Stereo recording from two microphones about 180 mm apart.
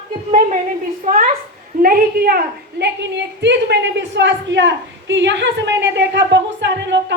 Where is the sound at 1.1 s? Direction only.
45° right (ahead or behind).